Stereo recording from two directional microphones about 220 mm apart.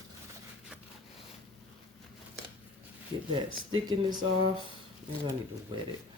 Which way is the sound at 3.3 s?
20° right (ahead or behind).